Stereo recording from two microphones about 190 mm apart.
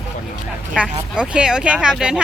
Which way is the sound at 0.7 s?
5° right (ahead or behind).